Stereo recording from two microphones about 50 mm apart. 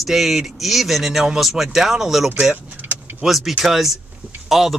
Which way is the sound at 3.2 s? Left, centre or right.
Centre.